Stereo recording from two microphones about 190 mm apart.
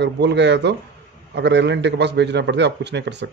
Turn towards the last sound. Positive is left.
turn(degrees=-65)  # may be behind; listen again after turning